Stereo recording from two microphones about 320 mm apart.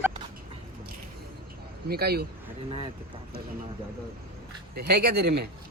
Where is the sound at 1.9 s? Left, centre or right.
Right.